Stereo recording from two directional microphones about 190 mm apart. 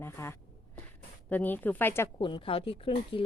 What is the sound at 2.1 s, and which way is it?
A woman's voice, 25° left (ahead or behind).